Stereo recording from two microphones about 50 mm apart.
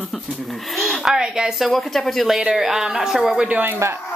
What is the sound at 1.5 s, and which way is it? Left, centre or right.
A child's voice, centre.